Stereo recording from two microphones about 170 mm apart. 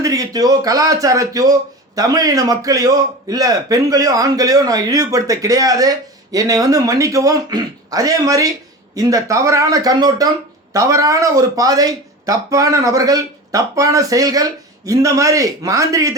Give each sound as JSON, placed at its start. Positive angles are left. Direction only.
{"t": 0.0, "sound": "a man's voice", "side_deg": -20}